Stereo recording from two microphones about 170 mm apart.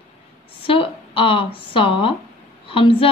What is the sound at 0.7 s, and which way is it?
A woman's voice, 30° left (ahead or behind).